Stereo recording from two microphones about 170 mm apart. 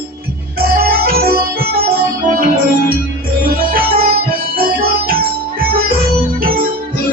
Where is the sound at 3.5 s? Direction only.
60° right (ahead or behind).